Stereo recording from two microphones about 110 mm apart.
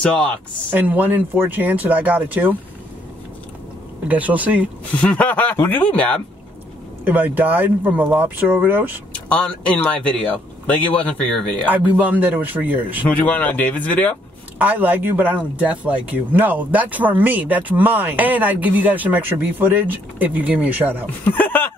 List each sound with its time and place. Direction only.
0.0 s speech: 10° left (ahead or behind)
0.7 s speech: 15° right (ahead or behind)
4.1 s speech: 15° right (ahead or behind)
5.0 s speech: 15° left (ahead or behind)
7.1 s speech: 15° right (ahead or behind)
9.1 s speech: 10° left (ahead or behind)
11.7 s speech: 15° right (ahead or behind)
13.1 s speech: 15° left (ahead or behind)
14.6 s speech: 15° right (ahead or behind)
21.2 s speech: 15° left (ahead or behind)